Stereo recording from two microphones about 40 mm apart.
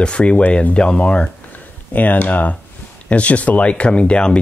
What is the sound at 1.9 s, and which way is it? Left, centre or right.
Speech, left.